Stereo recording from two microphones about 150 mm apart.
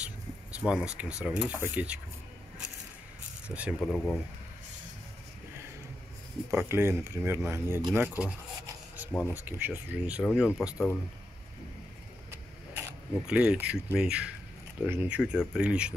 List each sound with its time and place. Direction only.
0.0 s a sound: 10° right (ahead or behind)
1.2 s speech: 5° right (ahead or behind)
3.4 s speech: 5° right (ahead or behind)
3.9 s speech: 10° left (ahead or behind)
6.5 s speech: 15° right (ahead or behind)
9.3 s speech: 10° right (ahead or behind)
12.3 s a sound: 15° right (ahead or behind)
13.9 s speech: 5° right (ahead or behind)